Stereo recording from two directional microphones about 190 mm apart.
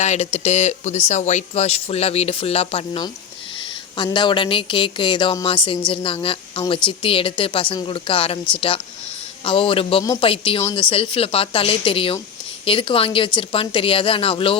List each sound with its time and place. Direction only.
0.0 s speech: 35° left (ahead or behind)